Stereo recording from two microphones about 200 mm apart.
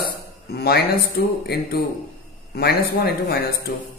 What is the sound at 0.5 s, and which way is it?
Speech, 50° left (ahead or behind).